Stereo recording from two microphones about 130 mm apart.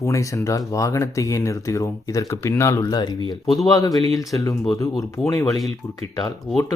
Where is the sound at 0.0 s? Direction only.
25° left (ahead or behind).